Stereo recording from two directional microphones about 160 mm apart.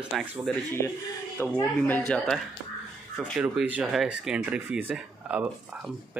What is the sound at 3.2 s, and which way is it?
Speech, 5° right (ahead or behind).